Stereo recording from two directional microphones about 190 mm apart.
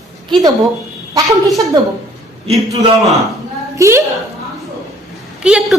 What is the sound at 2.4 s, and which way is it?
Speech, 35° right (ahead or behind).